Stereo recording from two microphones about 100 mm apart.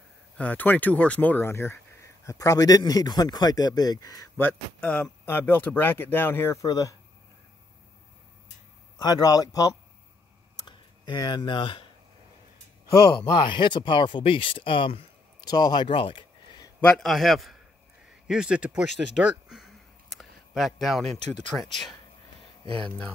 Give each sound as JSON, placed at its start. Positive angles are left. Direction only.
{"t": 0.4, "sound": "speech", "side_deg": 15}
{"t": 4.4, "sound": "speech", "side_deg": 15}
{"t": 8.9, "sound": "speech", "side_deg": 40}
{"t": 11.1, "sound": "speech", "side_deg": 50}
{"t": 13.2, "sound": "speech", "side_deg": 50}
{"t": 15.4, "sound": "speech", "side_deg": 40}
{"t": 16.8, "sound": "a man's voice", "side_deg": 0}